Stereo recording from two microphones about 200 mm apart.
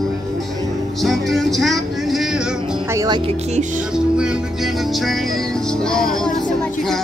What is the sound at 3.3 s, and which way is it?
Music, 35° right (ahead or behind).